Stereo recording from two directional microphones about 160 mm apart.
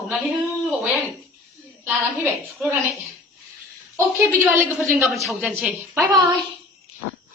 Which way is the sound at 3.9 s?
15° right (ahead or behind).